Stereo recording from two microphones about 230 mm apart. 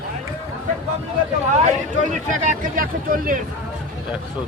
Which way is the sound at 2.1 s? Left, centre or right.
Right.